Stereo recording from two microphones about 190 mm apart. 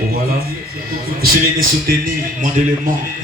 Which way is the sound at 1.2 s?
50° right (ahead or behind).